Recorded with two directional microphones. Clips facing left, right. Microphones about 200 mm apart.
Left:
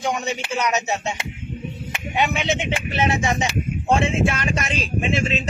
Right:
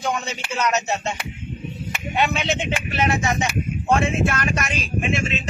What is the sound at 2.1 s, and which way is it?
A man's voice, 15° left (ahead or behind).